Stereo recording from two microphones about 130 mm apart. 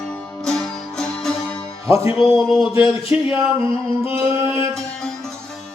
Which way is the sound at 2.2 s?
5° right (ahead or behind).